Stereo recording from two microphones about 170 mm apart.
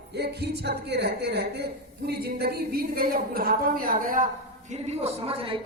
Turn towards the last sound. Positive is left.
turn(degrees=-35)  # may be behind; listen again after turning